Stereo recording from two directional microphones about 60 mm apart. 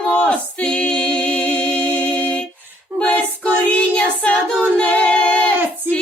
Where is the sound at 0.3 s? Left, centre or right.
Centre.